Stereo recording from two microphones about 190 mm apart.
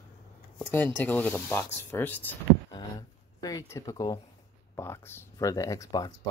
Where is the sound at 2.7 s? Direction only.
20° left (ahead or behind).